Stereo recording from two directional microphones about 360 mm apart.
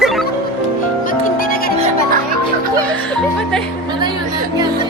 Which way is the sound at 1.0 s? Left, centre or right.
Left.